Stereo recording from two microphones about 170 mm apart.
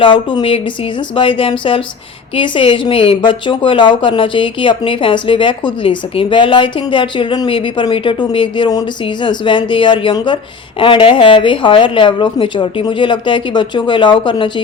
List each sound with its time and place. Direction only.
0.0 s a woman's voice: 30° left (ahead or behind)